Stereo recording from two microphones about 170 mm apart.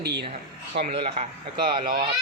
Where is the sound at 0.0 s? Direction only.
80° right.